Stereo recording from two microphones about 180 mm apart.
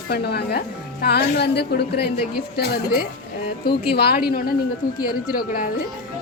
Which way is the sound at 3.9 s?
60° left (ahead or behind).